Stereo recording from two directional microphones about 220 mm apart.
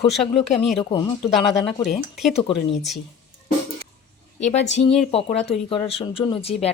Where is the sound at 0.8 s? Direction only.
20° left (ahead or behind).